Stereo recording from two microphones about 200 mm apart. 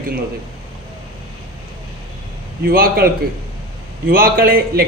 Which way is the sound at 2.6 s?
45° right (ahead or behind).